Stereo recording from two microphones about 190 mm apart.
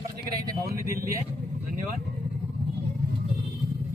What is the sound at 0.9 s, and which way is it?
Speech, 50° right (ahead or behind).